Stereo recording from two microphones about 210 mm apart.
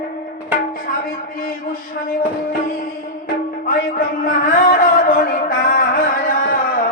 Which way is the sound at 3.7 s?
40° left (ahead or behind).